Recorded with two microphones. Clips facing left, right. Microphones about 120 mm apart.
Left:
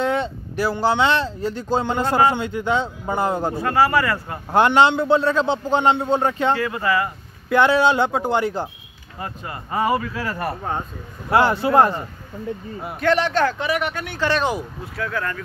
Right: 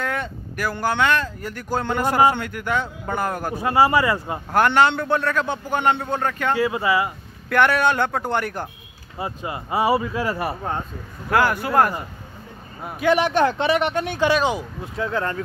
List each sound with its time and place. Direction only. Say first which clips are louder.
0.0 s vehicle: left 5 dB; 25° left (ahead or behind)
0.7 s a man's voice: left 2 dB; 15° left (ahead or behind)
2.0 s speech: right 1 dB; 15° right (ahead or behind)
2.3 s a man's voice: left 3 dB; 20° left (ahead or behind)
3.5 s speech: right 3 dB; 15° right (ahead or behind)
4.5 s a man's voice: left 2 dB; 20° left (ahead or behind)
6.5 s speech: right 1 dB; 15° right (ahead or behind)
7.4 s speech: left 2 dB; 15° left (ahead or behind)
9.2 s speech: right 3 dB; 15° right (ahead or behind)
10.4 s speech: even; centre (ahead or behind)
11.2 s a man's voice: left 2 dB; 25° left (ahead or behind)
13.0 s speech: right 1 dB; 15° right (ahead or behind)
13.6 s speech: right 3 dB; 25° right (ahead or behind)